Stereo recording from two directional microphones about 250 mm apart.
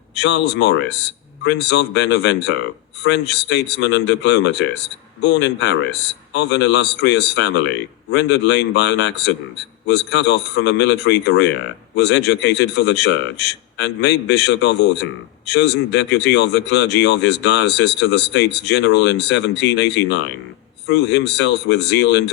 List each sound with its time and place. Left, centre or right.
0.1 s a man's voice: left